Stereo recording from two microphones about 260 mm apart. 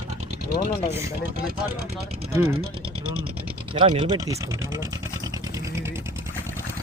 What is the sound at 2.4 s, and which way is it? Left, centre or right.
Speech, right.